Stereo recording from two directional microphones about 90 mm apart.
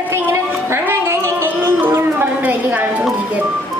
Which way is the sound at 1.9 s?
25° right (ahead or behind).